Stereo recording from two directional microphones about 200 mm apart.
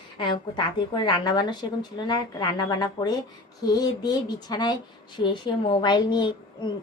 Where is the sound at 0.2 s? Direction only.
25° left (ahead or behind).